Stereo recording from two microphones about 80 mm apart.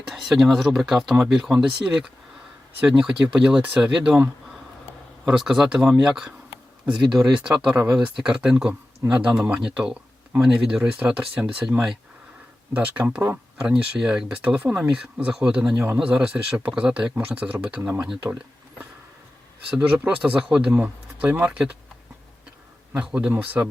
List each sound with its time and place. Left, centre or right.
0.1 s speech: centre
5.4 s speech: centre
13.0 s speech: right
13.7 s speech: centre
15.7 s speech: right
16.1 s speech: centre
19.8 s speech: centre
23.0 s speech: centre